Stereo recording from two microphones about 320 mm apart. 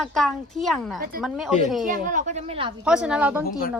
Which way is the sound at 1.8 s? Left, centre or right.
Right.